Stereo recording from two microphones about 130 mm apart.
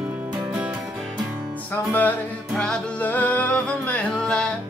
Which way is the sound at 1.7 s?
15° left (ahead or behind).